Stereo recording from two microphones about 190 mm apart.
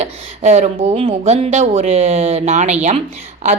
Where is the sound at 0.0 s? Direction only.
35° right (ahead or behind).